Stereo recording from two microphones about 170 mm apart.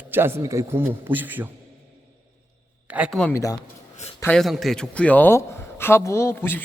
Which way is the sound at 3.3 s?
15° left (ahead or behind).